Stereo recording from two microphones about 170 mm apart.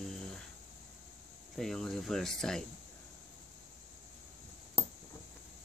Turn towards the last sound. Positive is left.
turn(degrees=5)  # may be behind; listen again after turning